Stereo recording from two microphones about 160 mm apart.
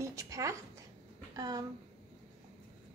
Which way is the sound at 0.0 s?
20° right (ahead or behind).